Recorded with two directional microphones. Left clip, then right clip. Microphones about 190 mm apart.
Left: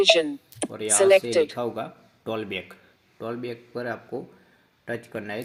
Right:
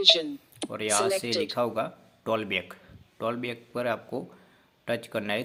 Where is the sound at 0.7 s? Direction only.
Centre (ahead or behind).